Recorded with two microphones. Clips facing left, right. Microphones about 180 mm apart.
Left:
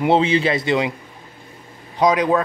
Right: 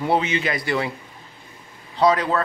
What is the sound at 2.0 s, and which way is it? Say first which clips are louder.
Speech: left 2 dB; 15° left (ahead or behind).